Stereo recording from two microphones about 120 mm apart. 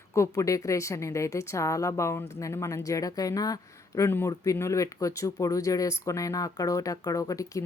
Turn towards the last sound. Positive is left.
turn(degrees=30)  # may be behind; listen again after turning